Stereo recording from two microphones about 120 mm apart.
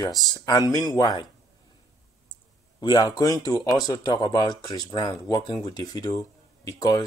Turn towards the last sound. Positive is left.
turn(degrees=30)  # may be behind; listen again after turning